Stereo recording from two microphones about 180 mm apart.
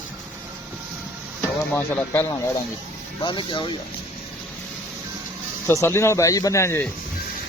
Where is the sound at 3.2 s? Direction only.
25° left (ahead or behind).